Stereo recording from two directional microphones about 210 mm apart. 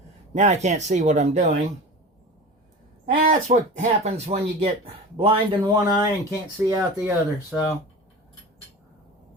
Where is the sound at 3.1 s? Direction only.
40° right (ahead or behind).